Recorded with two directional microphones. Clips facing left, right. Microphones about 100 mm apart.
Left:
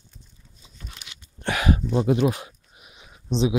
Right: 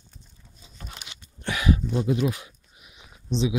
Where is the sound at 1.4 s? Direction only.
60° left (ahead or behind).